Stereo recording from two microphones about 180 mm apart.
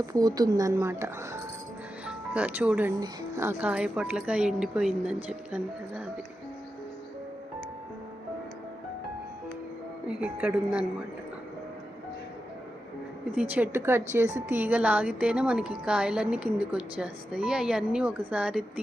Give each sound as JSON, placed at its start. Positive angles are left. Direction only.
{"t": 0.0, "sound": "speech", "side_deg": -20}
{"t": 10.1, "sound": "speech", "side_deg": -5}
{"t": 13.3, "sound": "a woman's voice", "side_deg": -10}